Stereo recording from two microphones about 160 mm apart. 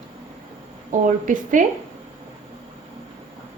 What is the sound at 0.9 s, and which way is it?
Speech, 55° right (ahead or behind).